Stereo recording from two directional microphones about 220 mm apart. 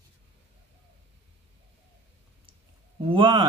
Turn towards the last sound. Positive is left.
turn(degrees=-20)  # may be behind; listen again after turning